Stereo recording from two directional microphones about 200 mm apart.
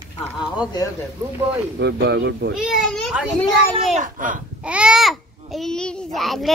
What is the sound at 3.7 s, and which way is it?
Speech, 35° right (ahead or behind).